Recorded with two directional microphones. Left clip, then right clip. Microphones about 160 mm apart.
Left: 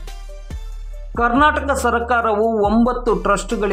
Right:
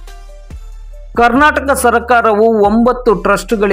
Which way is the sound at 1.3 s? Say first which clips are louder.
Right 5 dB; 25° right (ahead or behind).